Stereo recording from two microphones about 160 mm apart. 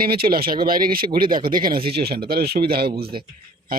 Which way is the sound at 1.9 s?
80° right.